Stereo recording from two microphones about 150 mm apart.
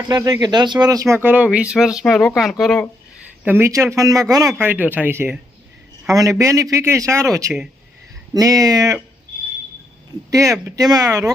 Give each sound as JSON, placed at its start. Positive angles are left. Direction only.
{"t": 0.1, "sound": "speech", "side_deg": -25}
{"t": 3.4, "sound": "speech", "side_deg": -15}
{"t": 4.6, "sound": "speech", "side_deg": -10}
{"t": 10.3, "sound": "speech", "side_deg": -20}